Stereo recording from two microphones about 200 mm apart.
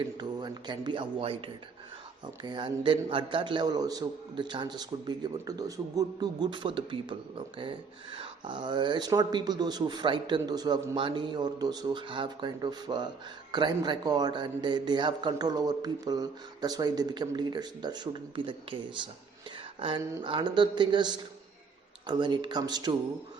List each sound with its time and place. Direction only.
0.2 s a man's voice: 20° right (ahead or behind)